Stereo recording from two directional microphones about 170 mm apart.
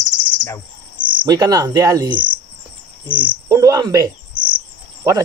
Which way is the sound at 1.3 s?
25° right (ahead or behind).